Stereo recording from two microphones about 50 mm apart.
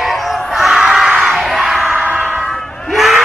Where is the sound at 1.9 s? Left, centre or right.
Right.